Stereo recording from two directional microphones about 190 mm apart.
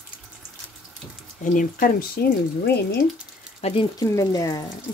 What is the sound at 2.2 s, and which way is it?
Speech, 55° left (ahead or behind).